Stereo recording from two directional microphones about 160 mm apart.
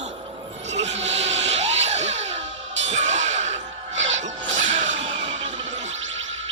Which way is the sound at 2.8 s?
50° right (ahead or behind).